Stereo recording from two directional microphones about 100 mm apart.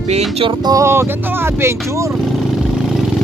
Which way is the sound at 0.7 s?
30° right (ahead or behind).